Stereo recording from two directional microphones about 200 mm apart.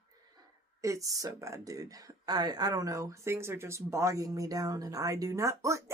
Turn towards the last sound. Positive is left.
turn(degrees=-15)  # may be behind; listen again after turning